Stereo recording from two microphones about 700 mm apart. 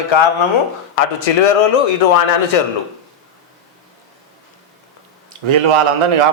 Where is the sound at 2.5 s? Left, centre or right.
Left.